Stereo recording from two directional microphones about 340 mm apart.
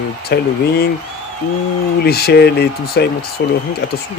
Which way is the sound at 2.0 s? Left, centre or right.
Left.